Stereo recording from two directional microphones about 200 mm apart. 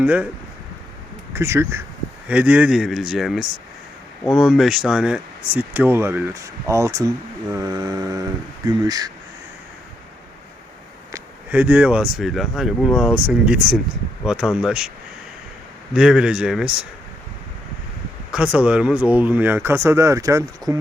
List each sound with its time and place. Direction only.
0.0 s speech: 5° right (ahead or behind)
1.3 s speech: 15° right (ahead or behind)
11.1 s speech: 10° right (ahead or behind)
16.0 s speech: 5° right (ahead or behind)
18.3 s speech: 5° right (ahead or behind)